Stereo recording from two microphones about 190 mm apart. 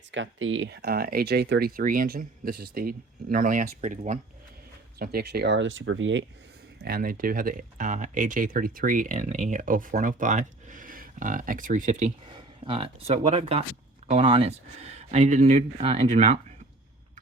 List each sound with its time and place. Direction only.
0.1 s speech: 85° right; by 4.2 s 40° right (ahead or behind)
4.9 s speech: 55° right (ahead or behind); by 6.2 s 80° right
6.8 s speech: 50° right (ahead or behind)
12.3 s speech: 25° right (ahead or behind)